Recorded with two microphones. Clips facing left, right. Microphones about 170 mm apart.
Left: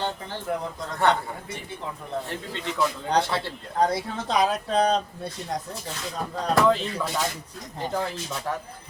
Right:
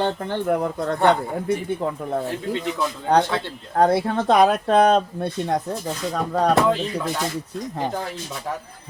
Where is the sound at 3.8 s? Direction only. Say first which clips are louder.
Right 6 dB; 60° right (ahead or behind).